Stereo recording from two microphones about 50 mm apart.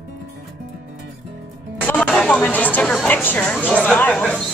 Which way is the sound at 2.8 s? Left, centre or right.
Centre.